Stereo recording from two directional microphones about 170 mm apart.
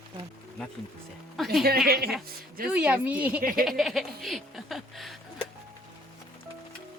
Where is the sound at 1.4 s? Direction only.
Centre (ahead or behind).